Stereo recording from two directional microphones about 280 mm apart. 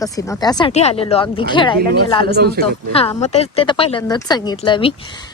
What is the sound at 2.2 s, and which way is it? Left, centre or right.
Speech, right.